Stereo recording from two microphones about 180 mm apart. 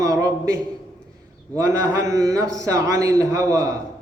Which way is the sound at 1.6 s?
15° right (ahead or behind).